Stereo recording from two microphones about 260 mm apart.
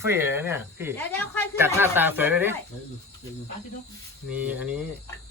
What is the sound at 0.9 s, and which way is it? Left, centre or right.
Speech, centre.